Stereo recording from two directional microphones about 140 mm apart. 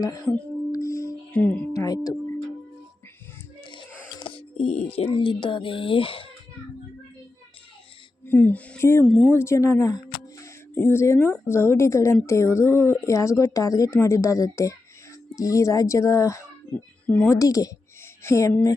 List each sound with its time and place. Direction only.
0.0 s speech: 25° left (ahead or behind)
0.7 s music: 20° left (ahead or behind)
1.3 s music: 10° left (ahead or behind)
1.7 s singing bowl: 25° left (ahead or behind)
4.2 s speech: 40° left (ahead or behind)
8.2 s speech: 15° left (ahead or behind)
9.0 s speech: 5° left (ahead or behind)
9.4 s speech: 20° left (ahead or behind)